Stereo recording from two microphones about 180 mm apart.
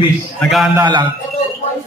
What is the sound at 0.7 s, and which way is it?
Speech, 25° right (ahead or behind).